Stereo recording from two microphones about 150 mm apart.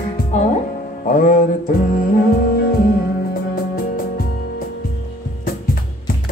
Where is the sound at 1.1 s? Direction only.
60° left (ahead or behind).